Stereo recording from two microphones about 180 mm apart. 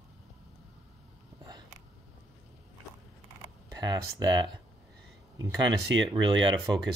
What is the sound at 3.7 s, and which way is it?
Speech, 20° right (ahead or behind).